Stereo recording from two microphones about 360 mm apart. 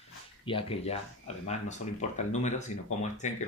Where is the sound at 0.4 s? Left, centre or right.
Centre.